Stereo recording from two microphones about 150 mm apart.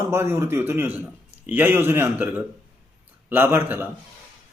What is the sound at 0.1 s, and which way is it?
A man's voice, 15° right (ahead or behind).